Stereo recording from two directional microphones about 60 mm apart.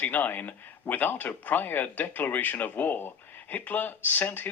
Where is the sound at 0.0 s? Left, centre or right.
Left.